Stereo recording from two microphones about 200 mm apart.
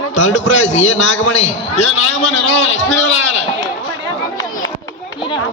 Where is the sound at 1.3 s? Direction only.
35° left (ahead or behind).